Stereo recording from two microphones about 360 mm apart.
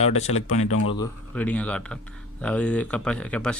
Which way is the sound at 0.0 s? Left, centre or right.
Centre.